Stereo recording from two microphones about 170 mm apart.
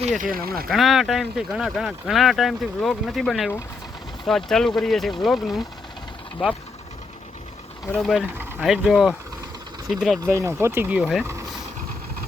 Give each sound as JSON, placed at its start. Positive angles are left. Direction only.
{"t": 0.2, "sound": "speech", "side_deg": -60}
{"t": 0.7, "sound": "speech", "side_deg": 0}
{"t": 7.9, "sound": "speech", "side_deg": 0}
{"t": 10.3, "sound": "speech", "side_deg": -15}